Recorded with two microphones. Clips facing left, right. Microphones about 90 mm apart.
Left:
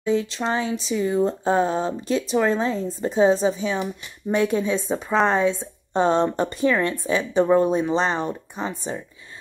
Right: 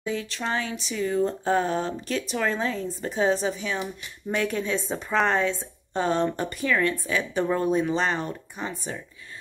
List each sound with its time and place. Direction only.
0.0 s speech: 25° left (ahead or behind)